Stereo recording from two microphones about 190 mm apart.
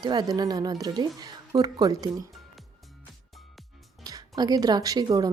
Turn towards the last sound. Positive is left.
turn(degrees=-20)  # may be behind; listen again after turning